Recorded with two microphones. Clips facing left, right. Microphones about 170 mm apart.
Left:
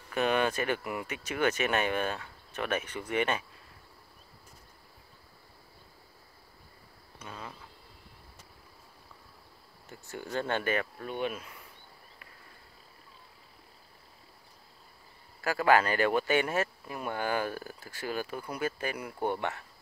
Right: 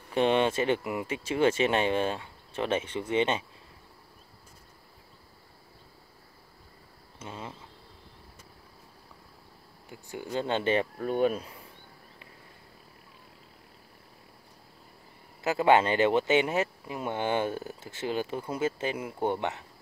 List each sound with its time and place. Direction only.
0.1 s speech: 25° right (ahead or behind)
7.2 s speech: 25° right (ahead or behind)
9.8 s speech: 15° right (ahead or behind)
11.1 s speech: 40° right (ahead or behind)
15.4 s speech: 25° right (ahead or behind)